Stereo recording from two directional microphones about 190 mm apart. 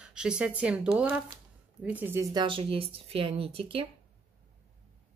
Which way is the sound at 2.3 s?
25° right (ahead or behind).